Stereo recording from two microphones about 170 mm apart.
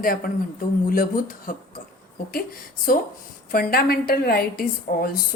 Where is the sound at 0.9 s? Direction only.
55° left (ahead or behind).